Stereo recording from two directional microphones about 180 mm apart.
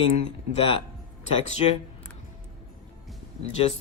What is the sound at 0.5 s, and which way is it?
Speech, 30° left (ahead or behind).